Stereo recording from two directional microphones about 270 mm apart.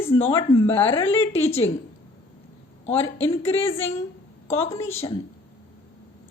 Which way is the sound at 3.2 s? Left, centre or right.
Left.